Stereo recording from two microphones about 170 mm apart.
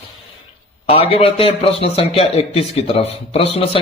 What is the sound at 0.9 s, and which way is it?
A man's voice, 35° left (ahead or behind).